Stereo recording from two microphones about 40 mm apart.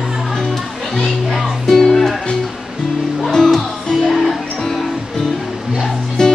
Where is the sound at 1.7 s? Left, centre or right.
Centre.